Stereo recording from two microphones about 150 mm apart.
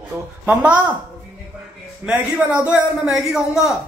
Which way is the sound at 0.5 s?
10° right (ahead or behind).